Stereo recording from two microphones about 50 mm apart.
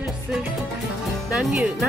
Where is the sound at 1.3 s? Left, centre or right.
Right.